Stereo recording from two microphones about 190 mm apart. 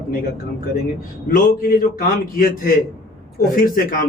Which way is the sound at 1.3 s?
50° left (ahead or behind).